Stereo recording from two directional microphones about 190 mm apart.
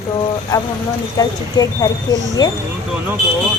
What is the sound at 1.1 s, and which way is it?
Speech, 20° left (ahead or behind).